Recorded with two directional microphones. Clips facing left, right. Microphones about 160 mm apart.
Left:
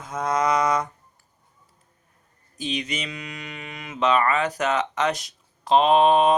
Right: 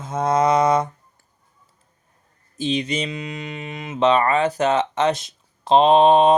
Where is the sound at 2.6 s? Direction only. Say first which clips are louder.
Right 6 dB; 30° right (ahead or behind).